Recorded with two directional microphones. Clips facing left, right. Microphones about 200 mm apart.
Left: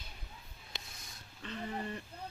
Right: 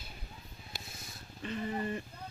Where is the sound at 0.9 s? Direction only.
5° right (ahead or behind).